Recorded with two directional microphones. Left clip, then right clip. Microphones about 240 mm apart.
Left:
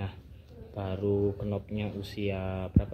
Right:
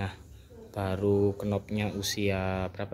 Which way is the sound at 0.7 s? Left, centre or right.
Centre.